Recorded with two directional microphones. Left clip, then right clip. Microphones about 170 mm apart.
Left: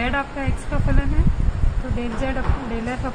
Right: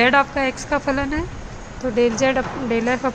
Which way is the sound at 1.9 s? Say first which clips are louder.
Right 10 dB; 55° right (ahead or behind).